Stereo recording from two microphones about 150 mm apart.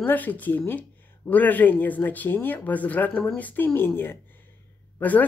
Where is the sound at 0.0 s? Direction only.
10° left (ahead or behind).